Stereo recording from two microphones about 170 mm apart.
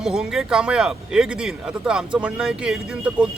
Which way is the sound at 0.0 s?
5° right (ahead or behind).